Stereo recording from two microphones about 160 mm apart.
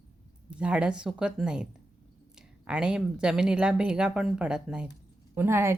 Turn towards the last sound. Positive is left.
turn(degrees=-15)  # may be behind; listen again after turning